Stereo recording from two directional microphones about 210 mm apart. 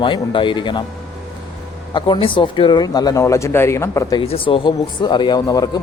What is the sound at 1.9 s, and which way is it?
Speech, 25° left (ahead or behind).